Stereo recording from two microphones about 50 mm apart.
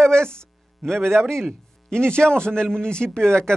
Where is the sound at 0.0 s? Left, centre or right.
Centre.